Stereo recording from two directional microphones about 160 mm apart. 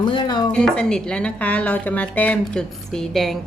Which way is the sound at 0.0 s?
30° left (ahead or behind).